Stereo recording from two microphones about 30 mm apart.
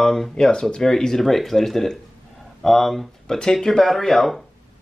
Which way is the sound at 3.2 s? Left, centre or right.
Left.